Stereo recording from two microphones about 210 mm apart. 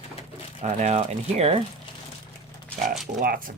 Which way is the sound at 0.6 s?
30° right (ahead or behind).